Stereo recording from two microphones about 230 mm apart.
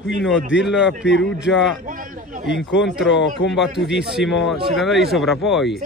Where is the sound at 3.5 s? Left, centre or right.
Centre.